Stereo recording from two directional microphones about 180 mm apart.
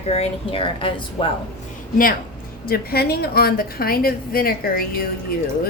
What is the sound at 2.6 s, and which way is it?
A woman's voice, 60° left (ahead or behind).